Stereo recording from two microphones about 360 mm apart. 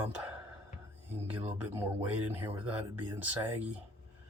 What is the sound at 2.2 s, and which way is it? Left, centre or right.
Speech, centre.